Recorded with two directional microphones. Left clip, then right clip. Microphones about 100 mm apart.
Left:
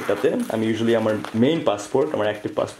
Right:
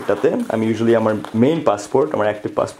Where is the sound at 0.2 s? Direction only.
50° right (ahead or behind).